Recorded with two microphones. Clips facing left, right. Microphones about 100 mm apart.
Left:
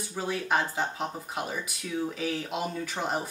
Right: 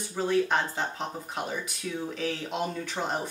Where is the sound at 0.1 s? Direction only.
5° left (ahead or behind).